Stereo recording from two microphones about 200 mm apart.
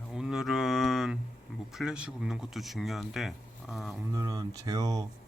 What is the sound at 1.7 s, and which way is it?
Speech, 5° right (ahead or behind).